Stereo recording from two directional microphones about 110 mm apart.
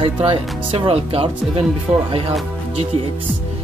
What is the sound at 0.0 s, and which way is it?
Speech, 60° right (ahead or behind).